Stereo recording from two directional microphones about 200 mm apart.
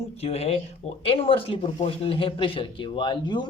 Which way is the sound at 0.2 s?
30° left (ahead or behind).